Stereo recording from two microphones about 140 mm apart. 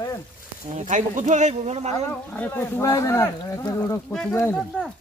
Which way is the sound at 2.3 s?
15° left (ahead or behind).